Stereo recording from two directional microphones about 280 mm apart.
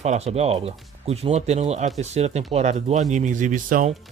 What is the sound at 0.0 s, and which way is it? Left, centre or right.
Speech, right.